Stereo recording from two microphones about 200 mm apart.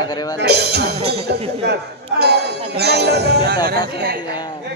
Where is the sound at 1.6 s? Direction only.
55° right (ahead or behind).